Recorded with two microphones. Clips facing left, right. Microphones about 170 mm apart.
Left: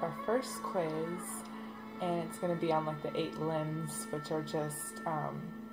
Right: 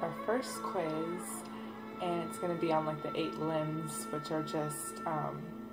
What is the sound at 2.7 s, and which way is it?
Speech, centre (ahead or behind).